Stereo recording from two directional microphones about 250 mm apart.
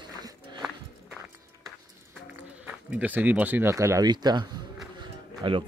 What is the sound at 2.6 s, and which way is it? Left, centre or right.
Speech, centre.